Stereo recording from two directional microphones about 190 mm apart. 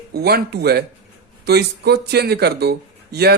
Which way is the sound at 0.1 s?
55° right (ahead or behind).